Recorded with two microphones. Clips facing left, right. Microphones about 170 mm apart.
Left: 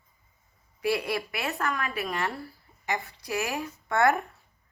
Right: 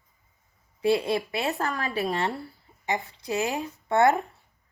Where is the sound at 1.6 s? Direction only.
35° right (ahead or behind).